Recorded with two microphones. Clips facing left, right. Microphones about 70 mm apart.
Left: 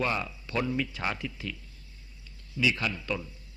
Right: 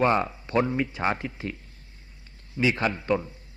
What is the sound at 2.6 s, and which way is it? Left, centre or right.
Speech, right.